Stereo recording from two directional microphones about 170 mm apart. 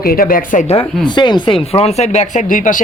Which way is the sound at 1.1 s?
25° left (ahead or behind).